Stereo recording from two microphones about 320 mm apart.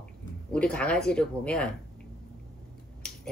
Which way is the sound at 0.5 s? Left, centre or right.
Centre.